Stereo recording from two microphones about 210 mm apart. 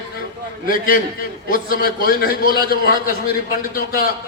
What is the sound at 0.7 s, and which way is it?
A man's voice, 40° left (ahead or behind).